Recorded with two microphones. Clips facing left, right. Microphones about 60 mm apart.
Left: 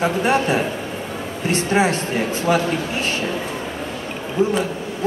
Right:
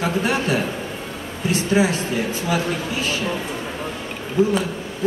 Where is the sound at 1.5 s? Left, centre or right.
Left.